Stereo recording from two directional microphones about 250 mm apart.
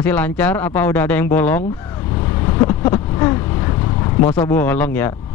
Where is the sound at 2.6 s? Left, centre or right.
Centre.